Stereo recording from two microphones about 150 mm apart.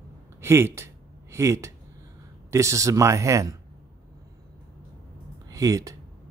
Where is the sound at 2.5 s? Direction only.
20° right (ahead or behind).